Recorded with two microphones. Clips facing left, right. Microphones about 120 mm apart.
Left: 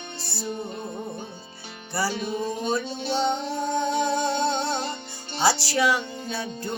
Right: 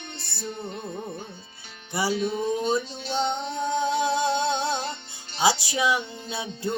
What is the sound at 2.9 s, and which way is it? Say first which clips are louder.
Music: left 2 dB; 50° left (ahead or behind).